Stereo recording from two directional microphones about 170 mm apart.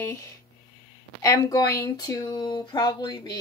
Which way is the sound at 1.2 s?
20° left (ahead or behind).